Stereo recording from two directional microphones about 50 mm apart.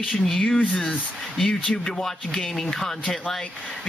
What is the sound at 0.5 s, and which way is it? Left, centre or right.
Speech, centre.